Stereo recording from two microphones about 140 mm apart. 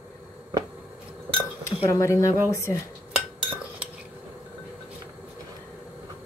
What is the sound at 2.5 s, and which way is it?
Speech, 20° left (ahead or behind).